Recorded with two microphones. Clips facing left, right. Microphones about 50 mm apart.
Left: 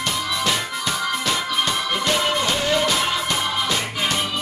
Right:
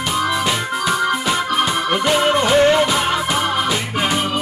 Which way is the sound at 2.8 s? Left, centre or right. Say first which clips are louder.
Right 4 dB; centre.